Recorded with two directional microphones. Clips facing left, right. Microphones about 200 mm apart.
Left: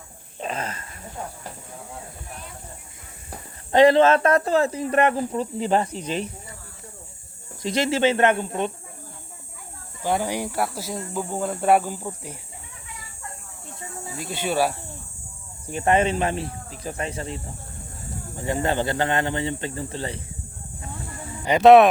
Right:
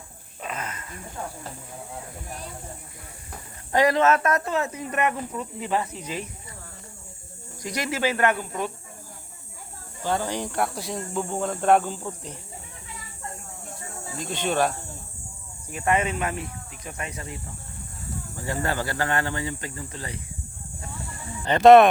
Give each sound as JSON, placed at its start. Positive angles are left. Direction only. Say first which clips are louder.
{"t": 0.3, "sound": "a sound", "louder": "left 4 dB", "side_deg": 30}
{"t": 3.2, "sound": "speech", "louder": "left 5 dB", "side_deg": 25}
{"t": 7.6, "sound": "speech", "louder": "left 6 dB", "side_deg": 25}
{"t": 10.0, "sound": "speech", "louder": "left 2 dB", "side_deg": 15}
{"t": 14.2, "sound": "speech", "louder": "left 1 dB", "side_deg": 10}
{"t": 15.7, "sound": "speech", "louder": "left 4 dB", "side_deg": 30}
{"t": 21.4, "sound": "speech", "louder": "left 1 dB", "side_deg": 5}